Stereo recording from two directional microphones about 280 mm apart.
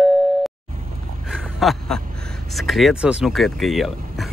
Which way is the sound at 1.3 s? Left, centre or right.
Centre.